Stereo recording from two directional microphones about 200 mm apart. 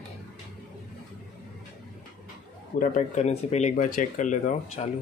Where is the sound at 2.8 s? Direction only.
40° left (ahead or behind).